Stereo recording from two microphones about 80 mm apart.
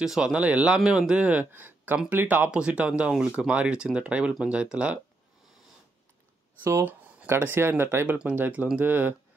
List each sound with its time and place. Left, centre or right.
0.0 s speech: centre
6.6 s speech: right
8.1 s speech: centre